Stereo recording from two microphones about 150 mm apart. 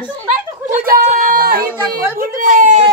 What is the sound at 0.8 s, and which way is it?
Speech, 70° right (ahead or behind).